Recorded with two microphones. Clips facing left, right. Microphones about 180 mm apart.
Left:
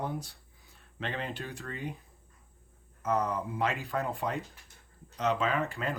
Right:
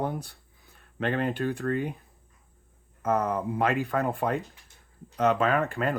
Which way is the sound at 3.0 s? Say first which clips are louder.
Right 4 dB; 60° right (ahead or behind).